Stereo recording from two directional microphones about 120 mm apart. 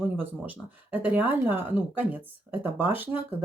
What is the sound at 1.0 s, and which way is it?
Speech, 15° right (ahead or behind).